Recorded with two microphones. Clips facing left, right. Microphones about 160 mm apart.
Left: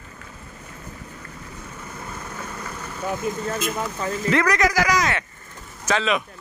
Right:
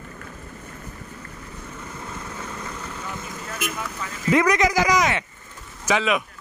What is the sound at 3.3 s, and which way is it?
Speech, 20° left (ahead or behind).